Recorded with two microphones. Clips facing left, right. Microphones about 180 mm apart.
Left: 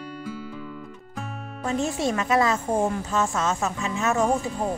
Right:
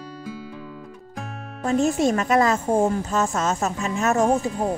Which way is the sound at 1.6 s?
45° right (ahead or behind).